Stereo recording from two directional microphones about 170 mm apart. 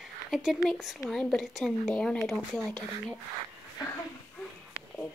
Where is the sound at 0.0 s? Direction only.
Centre (ahead or behind).